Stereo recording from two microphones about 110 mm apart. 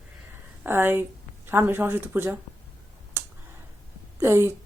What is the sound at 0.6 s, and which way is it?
Speech, 20° right (ahead or behind).